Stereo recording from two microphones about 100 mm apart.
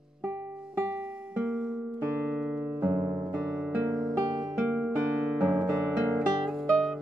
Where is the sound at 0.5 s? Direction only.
10° right (ahead or behind).